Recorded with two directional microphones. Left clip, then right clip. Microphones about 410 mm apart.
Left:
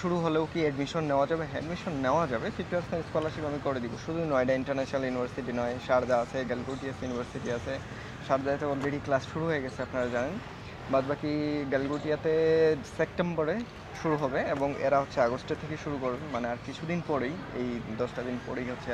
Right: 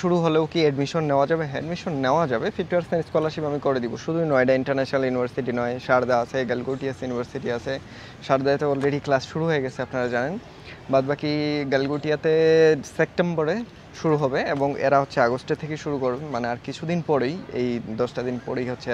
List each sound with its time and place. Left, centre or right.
0.0 s speech: right